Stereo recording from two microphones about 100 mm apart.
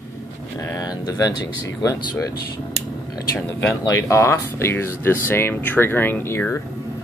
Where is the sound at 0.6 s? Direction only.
40° left (ahead or behind).